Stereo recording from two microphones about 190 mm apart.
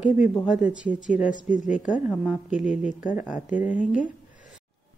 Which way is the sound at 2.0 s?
5° right (ahead or behind).